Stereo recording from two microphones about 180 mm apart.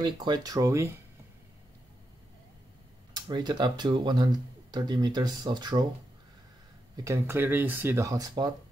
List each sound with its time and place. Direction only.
0.0 s speech: 25° right (ahead or behind)
3.1 s speech: 25° right (ahead or behind)
7.1 s speech: 10° right (ahead or behind)